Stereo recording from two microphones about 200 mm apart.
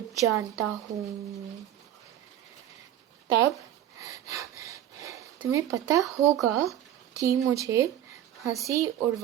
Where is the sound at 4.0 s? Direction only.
15° right (ahead or behind).